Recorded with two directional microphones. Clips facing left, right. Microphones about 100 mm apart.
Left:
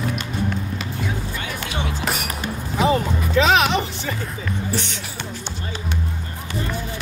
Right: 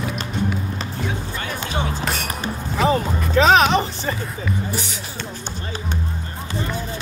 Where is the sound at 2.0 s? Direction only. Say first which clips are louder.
Even; 5° left (ahead or behind).